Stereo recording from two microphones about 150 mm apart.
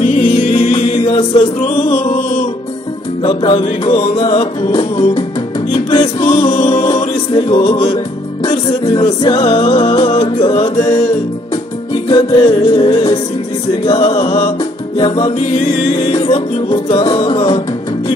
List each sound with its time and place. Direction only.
0.0 s music: 50° left (ahead or behind)
1.6 s music: 55° left (ahead or behind)
3.2 s music: 40° left (ahead or behind)
12.1 s music: 35° left (ahead or behind)